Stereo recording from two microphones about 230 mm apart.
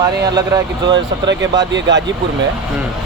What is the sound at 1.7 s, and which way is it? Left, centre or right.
Speech, right.